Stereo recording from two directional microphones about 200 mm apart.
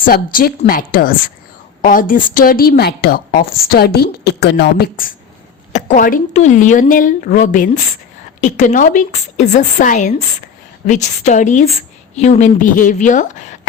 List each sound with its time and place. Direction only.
0.0 s a woman's voice: 45° left (ahead or behind)